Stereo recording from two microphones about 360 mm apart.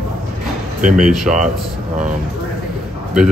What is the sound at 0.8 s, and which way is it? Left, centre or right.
Speech, right.